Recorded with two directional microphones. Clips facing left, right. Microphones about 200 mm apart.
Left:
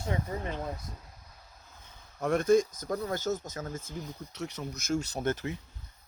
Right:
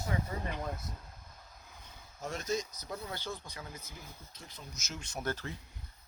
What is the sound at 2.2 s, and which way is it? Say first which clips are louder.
Speech: left 12 dB; 55° left (ahead or behind).